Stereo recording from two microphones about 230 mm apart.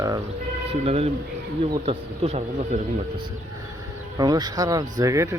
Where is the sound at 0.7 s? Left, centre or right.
Right.